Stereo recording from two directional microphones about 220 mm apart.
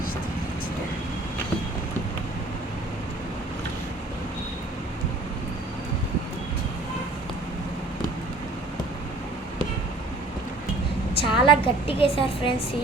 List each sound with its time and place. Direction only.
11.1 s a woman's voice: 25° left (ahead or behind)